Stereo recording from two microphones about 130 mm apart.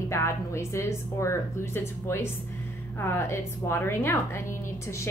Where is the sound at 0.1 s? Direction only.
20° left (ahead or behind).